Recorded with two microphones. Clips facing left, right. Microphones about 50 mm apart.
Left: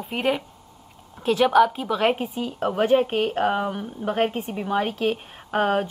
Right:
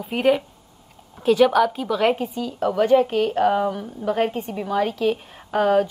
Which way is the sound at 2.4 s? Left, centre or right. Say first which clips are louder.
Right 2 dB; left.